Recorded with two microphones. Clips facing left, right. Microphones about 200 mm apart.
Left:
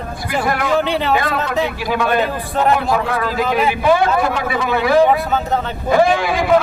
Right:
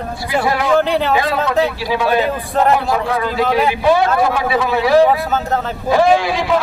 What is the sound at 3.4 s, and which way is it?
Speech, centre (ahead or behind).